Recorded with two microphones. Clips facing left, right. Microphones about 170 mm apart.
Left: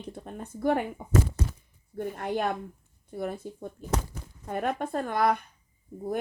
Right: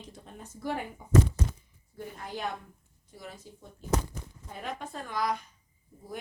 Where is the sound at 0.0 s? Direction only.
55° left (ahead or behind).